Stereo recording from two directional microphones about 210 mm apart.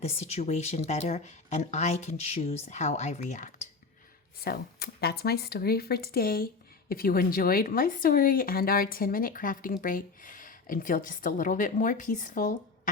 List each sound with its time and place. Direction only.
0.0 s speech: 30° left (ahead or behind)
4.4 s speech: 50° left (ahead or behind)